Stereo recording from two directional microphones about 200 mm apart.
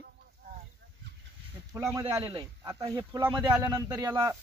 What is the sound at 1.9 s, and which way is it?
Speech, 20° right (ahead or behind).